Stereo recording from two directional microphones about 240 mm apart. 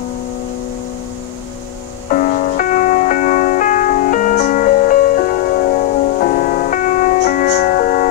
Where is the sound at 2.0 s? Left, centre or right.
Left.